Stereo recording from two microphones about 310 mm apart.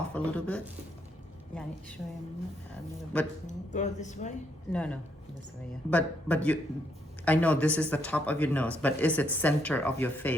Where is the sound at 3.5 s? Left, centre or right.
Left.